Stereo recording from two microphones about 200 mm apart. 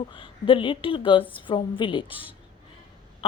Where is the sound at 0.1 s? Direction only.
25° left (ahead or behind).